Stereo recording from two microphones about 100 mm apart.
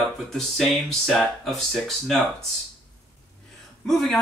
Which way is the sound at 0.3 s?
5° left (ahead or behind).